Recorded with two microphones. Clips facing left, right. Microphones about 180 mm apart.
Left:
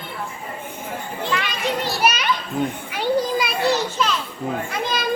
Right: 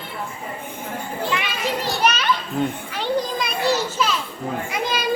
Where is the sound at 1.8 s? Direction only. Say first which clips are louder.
Right 2 dB; 10° left (ahead or behind).